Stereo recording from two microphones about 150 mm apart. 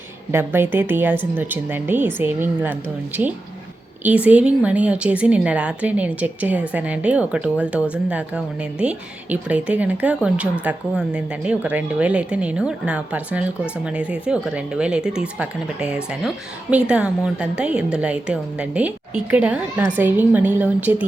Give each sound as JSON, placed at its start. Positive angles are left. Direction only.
{"t": 0.3, "sound": "a woman's voice", "side_deg": -15}